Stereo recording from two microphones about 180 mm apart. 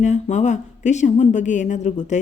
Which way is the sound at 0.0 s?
40° left (ahead or behind).